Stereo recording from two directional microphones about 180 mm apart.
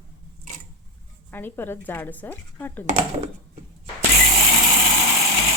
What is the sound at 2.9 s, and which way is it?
Speech, 40° right (ahead or behind).